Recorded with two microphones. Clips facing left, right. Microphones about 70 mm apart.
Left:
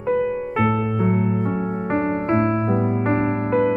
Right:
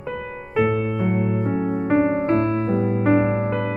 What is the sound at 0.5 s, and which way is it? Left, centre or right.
Music, left.